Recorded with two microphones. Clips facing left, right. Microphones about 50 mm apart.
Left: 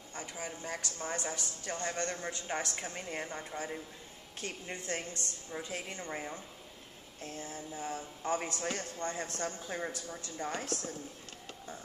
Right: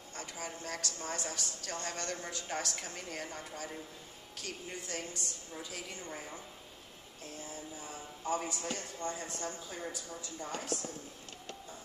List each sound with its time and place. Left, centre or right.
0.1 s a woman's voice: centre; by 6.2 s left
7.2 s a man's voice: left